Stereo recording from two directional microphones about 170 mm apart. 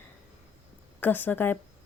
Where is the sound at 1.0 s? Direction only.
10° left (ahead or behind).